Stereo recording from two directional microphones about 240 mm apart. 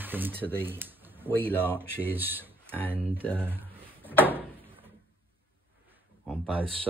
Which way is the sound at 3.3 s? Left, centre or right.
Centre.